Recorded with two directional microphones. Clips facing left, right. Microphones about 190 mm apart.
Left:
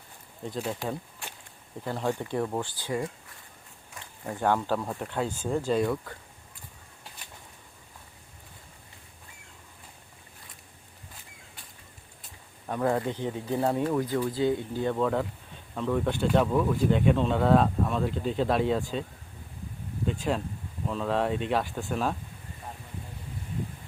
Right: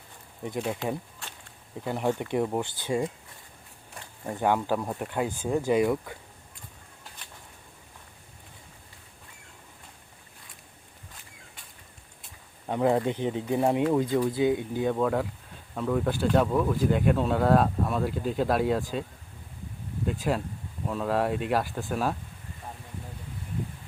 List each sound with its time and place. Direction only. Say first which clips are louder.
0.4 s speech: right 2 dB; 15° right (ahead or behind)
1.8 s speech: right 2 dB; 15° right (ahead or behind)
4.4 s speech: right 1 dB; 10° right (ahead or behind)
12.6 s speech: right 3 dB; 20° right (ahead or behind); by 19.0 s centre (ahead or behind)
20.1 s speech: right 1 dB; 5° right (ahead or behind)